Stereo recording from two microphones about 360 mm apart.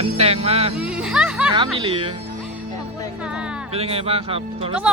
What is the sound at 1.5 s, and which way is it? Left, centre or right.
Speech, centre.